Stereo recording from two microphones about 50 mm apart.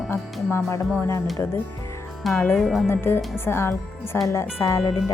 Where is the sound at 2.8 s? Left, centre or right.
Left.